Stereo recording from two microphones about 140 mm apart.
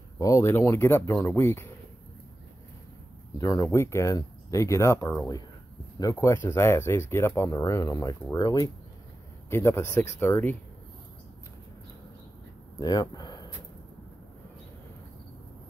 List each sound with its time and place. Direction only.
0.2 s speech: 20° left (ahead or behind)
3.3 s speech: 25° left (ahead or behind)
12.7 s speech: 30° left (ahead or behind)